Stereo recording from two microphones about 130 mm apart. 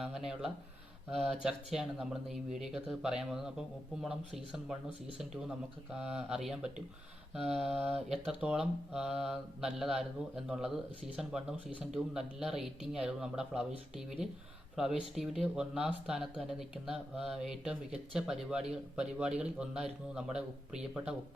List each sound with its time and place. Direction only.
0.0 s a man's voice: 5° right (ahead or behind)